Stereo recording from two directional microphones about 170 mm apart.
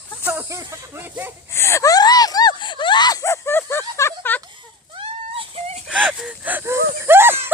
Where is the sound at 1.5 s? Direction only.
15° left (ahead or behind).